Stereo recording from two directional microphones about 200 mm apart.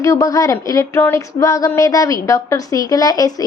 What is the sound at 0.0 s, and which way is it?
Speech, 15° left (ahead or behind).